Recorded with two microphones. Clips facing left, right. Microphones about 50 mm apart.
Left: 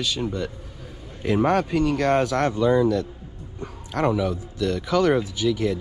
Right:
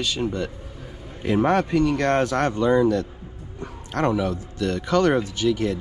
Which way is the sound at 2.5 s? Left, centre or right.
Right.